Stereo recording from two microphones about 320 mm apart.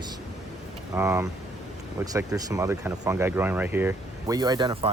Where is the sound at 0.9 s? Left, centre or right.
Centre.